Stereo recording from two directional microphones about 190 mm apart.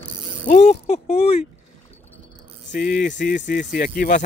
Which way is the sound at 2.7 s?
50° left (ahead or behind).